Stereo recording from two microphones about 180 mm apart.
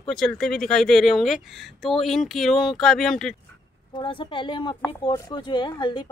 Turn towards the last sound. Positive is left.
turn(degrees=25)  # may be behind; listen again after turning